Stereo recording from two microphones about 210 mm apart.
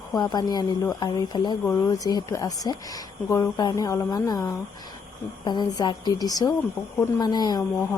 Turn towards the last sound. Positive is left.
turn(degrees=20)  # may be behind; listen again after turning